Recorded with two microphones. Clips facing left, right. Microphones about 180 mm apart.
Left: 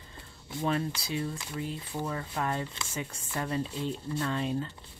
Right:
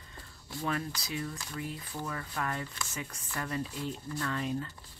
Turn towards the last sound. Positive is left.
turn(degrees=25)  # may be behind; listen again after turning